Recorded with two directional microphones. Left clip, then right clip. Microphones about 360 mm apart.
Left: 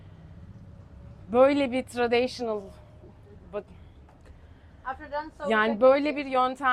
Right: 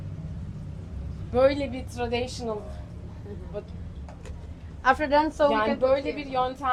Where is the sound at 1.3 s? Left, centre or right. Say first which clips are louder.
Left 2 dB; left.